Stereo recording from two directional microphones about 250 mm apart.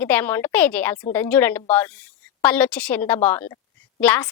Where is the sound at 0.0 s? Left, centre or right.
Centre.